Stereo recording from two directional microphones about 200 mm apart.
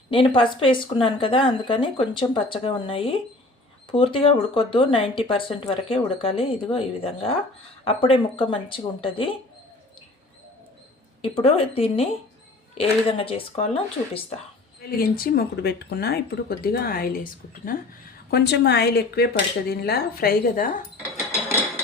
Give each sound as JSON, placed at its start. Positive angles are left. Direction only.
{"t": 0.1, "sound": "speech", "side_deg": 25}
{"t": 11.2, "sound": "speech", "side_deg": 30}
{"t": 14.8, "sound": "speech", "side_deg": 45}
{"t": 18.3, "sound": "speech", "side_deg": 55}